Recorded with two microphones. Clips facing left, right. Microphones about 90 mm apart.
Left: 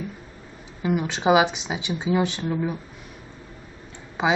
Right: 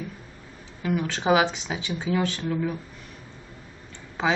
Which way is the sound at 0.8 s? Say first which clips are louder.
Left 2 dB; 20° left (ahead or behind).